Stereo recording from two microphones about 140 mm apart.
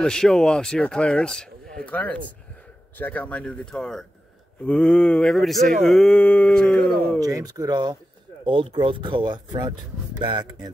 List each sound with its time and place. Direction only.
0.0 s speech: 5° left (ahead or behind)
7.2 s speech: 25° right (ahead or behind)